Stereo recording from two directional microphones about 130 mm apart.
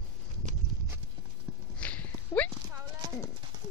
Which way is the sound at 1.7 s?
10° left (ahead or behind).